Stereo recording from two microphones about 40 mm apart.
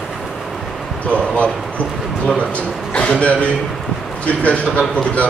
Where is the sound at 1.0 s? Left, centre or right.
Left.